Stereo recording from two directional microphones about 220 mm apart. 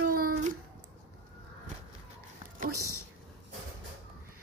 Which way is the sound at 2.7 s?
90° right.